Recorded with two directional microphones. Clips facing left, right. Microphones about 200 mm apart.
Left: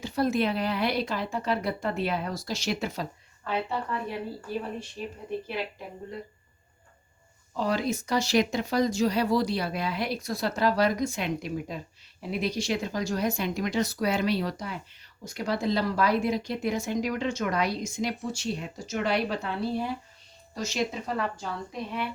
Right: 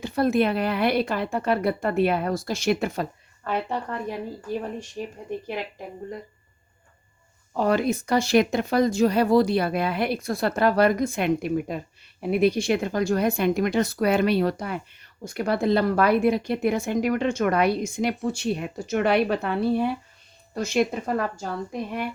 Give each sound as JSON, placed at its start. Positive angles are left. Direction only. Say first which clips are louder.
{"t": 0.0, "sound": "speech", "louder": "right 4 dB", "side_deg": -55}
{"t": 5.0, "sound": "a woman's voice", "louder": "right 5 dB", "side_deg": -45}
{"t": 7.5, "sound": "a woman's voice", "louder": "right 5 dB", "side_deg": -55}